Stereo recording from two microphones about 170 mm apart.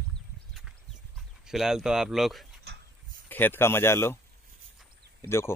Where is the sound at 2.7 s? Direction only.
75° right (ahead or behind).